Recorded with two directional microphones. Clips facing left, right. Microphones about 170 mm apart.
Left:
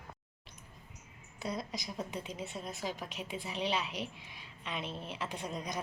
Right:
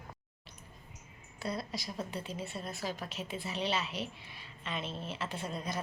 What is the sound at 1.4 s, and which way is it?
A woman's voice, 15° left (ahead or behind).